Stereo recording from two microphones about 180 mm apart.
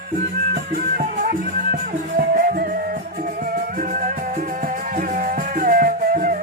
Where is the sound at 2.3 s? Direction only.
50° right (ahead or behind).